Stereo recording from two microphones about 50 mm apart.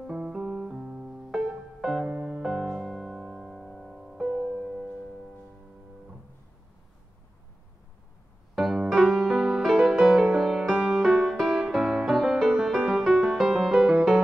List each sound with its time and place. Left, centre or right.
0.0 s music: centre
2.0 s music: right
2.4 s music: centre
8.5 s music: centre